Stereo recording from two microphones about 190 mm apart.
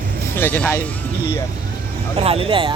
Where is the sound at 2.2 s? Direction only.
30° right (ahead or behind).